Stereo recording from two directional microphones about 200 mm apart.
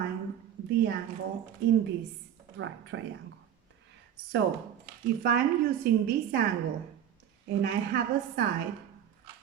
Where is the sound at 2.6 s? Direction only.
70° right (ahead or behind).